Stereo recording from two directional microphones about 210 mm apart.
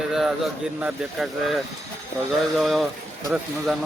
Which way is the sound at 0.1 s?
Centre (ahead or behind).